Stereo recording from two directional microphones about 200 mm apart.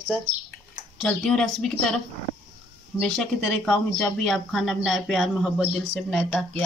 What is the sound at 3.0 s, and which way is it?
Speech, centre (ahead or behind).